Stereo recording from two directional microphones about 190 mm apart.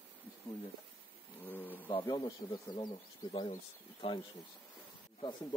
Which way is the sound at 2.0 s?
20° left (ahead or behind).